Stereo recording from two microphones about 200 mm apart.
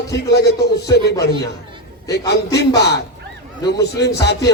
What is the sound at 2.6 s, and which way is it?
Speech, 55° left (ahead or behind).